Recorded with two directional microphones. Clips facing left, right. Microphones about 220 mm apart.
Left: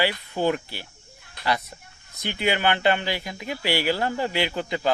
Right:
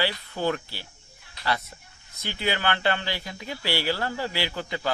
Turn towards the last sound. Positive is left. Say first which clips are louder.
# left 4 dB
turn(degrees=20)  # may be behind; listen again after turning